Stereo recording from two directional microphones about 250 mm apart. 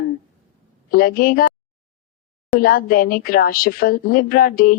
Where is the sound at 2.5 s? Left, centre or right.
Left.